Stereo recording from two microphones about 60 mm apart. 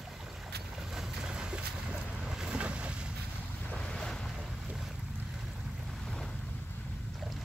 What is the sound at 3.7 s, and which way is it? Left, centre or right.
Boat, centre.